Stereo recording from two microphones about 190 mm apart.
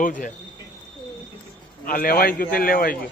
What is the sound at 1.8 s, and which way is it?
A man's voice, 50° left (ahead or behind).